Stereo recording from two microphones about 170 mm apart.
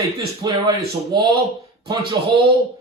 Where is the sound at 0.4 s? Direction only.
20° right (ahead or behind).